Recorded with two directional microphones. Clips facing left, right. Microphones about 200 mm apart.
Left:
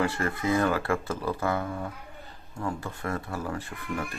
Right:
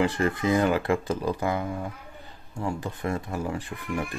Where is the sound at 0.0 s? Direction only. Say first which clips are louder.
Right 3 dB; 15° right (ahead or behind).